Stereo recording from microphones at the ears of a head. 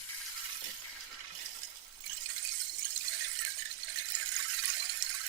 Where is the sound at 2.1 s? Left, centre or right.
Right.